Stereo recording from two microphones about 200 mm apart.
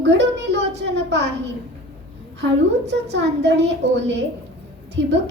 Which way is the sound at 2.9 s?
60° right (ahead or behind).